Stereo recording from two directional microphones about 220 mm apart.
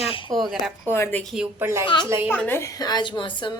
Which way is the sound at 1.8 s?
20° left (ahead or behind).